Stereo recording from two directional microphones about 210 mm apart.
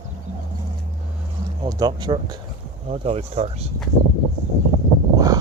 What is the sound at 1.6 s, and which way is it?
Speech, 20° right (ahead or behind).